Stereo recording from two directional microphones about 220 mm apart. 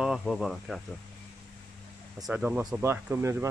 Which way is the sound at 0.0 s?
Centre (ahead or behind).